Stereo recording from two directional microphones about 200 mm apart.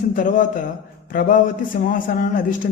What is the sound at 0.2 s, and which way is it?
A man's voice, 40° left (ahead or behind).